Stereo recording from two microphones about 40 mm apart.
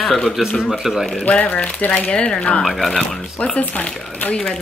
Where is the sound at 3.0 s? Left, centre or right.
Centre.